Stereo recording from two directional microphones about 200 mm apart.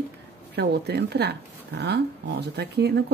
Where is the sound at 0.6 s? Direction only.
55° right (ahead or behind).